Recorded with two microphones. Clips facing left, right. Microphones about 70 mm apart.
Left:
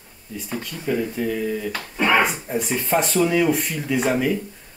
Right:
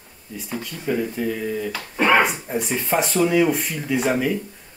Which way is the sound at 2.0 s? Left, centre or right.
Right.